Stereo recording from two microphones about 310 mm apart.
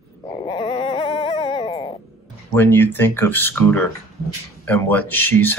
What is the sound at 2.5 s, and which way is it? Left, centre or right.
Speech, centre.